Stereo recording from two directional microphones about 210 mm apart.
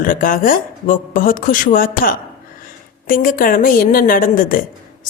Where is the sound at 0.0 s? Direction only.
40° left (ahead or behind).